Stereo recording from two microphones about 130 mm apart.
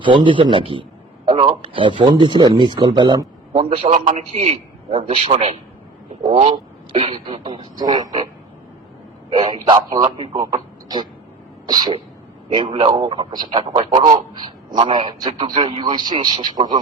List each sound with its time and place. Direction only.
0.0 s a man's voice: 40° right (ahead or behind)
3.5 s a man's voice: 50° right (ahead or behind); by 8.2 s 30° right (ahead or behind)
9.3 s a man's voice: 35° right (ahead or behind)
13.6 s a man's voice: 45° right (ahead or behind)
13.9 s a man's voice: 35° right (ahead or behind)